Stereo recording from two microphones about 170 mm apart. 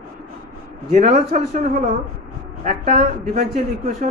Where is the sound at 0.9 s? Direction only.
40° right (ahead or behind).